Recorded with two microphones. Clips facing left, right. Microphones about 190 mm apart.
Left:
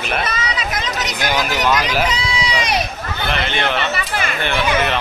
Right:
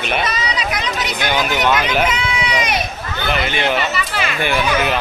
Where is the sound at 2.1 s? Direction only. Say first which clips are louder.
Right 1 dB; 35° left (ahead or behind).